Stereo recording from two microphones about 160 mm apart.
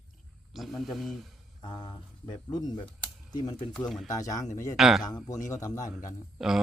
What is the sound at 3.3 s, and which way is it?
Speech, 25° left (ahead or behind).